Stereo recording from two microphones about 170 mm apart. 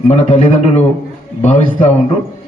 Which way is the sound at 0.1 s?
40° left (ahead or behind).